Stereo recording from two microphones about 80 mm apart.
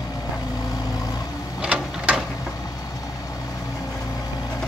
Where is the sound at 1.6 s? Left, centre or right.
Centre.